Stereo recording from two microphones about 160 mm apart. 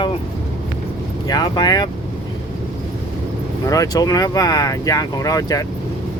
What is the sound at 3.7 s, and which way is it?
Speech, 20° left (ahead or behind).